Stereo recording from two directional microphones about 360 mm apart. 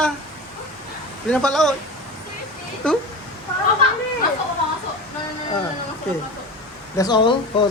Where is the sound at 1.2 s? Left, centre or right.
Centre.